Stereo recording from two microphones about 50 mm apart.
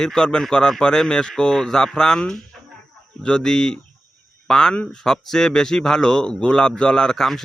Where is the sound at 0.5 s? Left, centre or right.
Centre.